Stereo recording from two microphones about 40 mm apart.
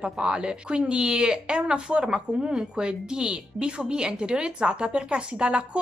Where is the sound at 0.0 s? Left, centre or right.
Right.